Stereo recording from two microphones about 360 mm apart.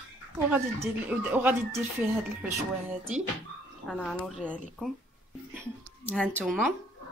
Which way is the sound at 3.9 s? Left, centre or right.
Centre.